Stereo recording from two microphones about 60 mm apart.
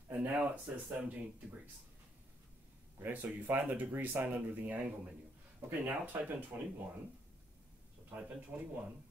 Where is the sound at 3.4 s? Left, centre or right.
Right.